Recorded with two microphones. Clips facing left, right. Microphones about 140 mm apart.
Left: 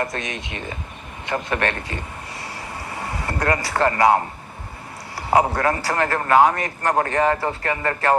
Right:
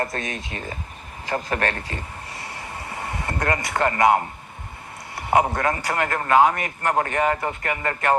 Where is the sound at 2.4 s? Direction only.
30° left (ahead or behind).